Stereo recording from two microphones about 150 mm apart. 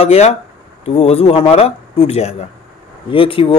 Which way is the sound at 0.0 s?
45° left (ahead or behind).